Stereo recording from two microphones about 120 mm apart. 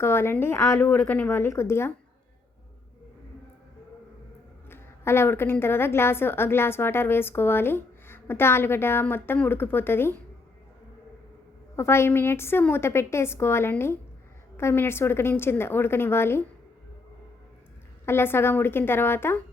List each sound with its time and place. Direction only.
0.0 s a woman's voice: 20° left (ahead or behind)
4.7 s a woman's voice: 20° left (ahead or behind)
11.8 s a woman's voice: 20° left (ahead or behind)
18.0 s a woman's voice: 20° left (ahead or behind)